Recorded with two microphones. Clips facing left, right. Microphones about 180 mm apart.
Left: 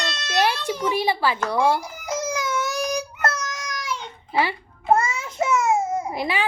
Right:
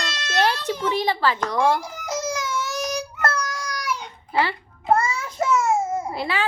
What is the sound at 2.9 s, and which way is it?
Child singing, 15° left (ahead or behind).